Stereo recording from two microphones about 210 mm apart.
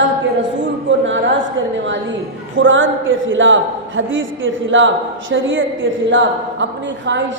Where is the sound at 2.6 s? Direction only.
65° right (ahead or behind).